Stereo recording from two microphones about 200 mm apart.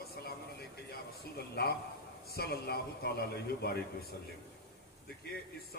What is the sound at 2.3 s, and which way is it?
Speech, 50° left (ahead or behind).